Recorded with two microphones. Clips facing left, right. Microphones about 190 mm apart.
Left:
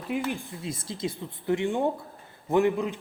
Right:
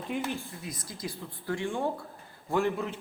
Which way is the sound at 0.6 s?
25° left (ahead or behind).